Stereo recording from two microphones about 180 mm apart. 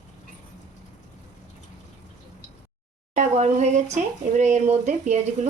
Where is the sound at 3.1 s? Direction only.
40° right (ahead or behind).